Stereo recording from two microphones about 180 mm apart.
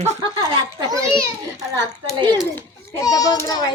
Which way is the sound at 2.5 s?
15° left (ahead or behind).